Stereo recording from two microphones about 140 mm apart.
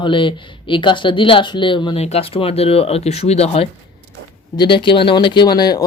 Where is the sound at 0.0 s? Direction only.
35° left (ahead or behind).